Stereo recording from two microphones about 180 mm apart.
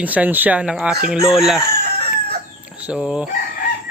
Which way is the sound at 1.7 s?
60° right (ahead or behind).